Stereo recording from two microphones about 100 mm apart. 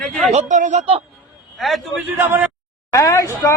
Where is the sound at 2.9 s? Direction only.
35° left (ahead or behind).